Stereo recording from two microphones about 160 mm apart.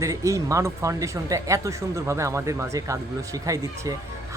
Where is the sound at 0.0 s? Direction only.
20° right (ahead or behind).